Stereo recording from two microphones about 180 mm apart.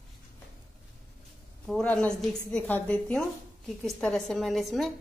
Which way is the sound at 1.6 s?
5° left (ahead or behind).